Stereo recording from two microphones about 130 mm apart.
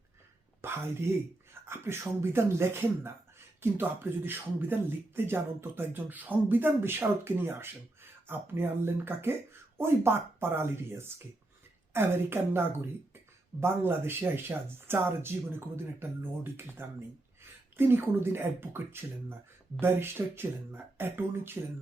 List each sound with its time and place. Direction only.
0.6 s a woman's voice: 20° right (ahead or behind)